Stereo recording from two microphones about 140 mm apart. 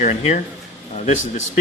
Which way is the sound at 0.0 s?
65° left (ahead or behind).